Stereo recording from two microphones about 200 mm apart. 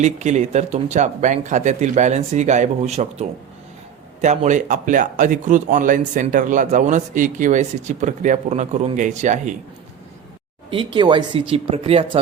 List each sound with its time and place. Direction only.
0.0 s speech: 35° right (ahead or behind)
10.7 s speech: 25° right (ahead or behind)